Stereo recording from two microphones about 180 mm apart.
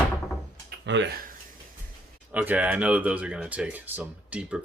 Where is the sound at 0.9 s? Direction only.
80° right.